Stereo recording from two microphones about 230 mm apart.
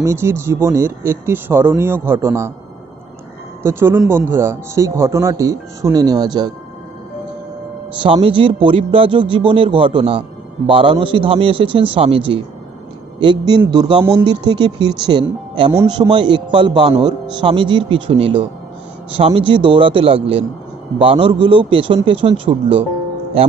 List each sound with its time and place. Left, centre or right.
0.0 s a man's voice: centre
3.6 s a man's voice: centre
8.0 s a man's voice: right
13.2 s a man's voice: centre